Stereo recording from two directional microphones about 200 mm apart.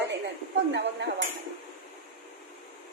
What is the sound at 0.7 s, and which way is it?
Speech, 60° right (ahead or behind).